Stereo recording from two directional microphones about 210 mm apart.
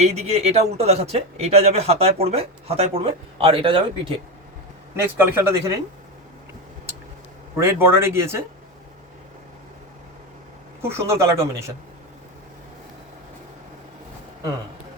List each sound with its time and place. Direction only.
0.0 s speech: 30° right (ahead or behind)
5.1 s speech: 10° right (ahead or behind)
7.5 s speech: 10° right (ahead or behind)
10.8 s speech: 15° right (ahead or behind)